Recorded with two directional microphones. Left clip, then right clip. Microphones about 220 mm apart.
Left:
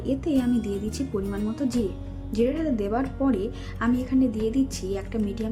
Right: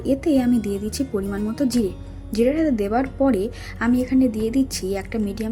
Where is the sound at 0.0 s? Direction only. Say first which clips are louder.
Right 6 dB; 15° right (ahead or behind).